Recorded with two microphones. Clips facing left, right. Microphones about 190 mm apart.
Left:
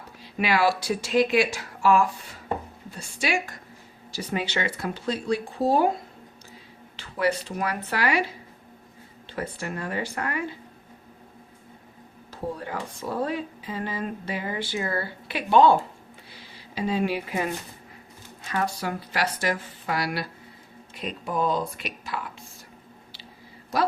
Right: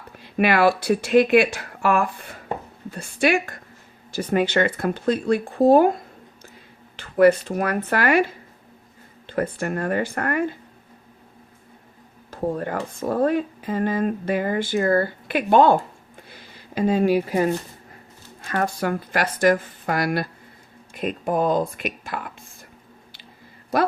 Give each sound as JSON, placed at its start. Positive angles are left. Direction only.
{"t": 0.2, "sound": "speech", "side_deg": -55}
{"t": 12.3, "sound": "speech", "side_deg": -50}
{"t": 16.3, "sound": "a sound", "side_deg": -50}
{"t": 17.0, "sound": "speech", "side_deg": -40}
{"t": 18.4, "sound": "speech", "side_deg": -50}